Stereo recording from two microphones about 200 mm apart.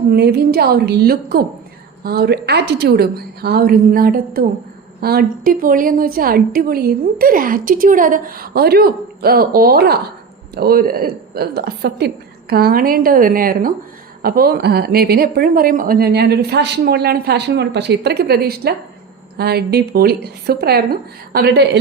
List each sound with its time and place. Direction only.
0.1 s a woman's voice: 55° right (ahead or behind)